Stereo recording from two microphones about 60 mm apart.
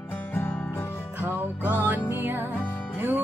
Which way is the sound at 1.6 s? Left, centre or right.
Right.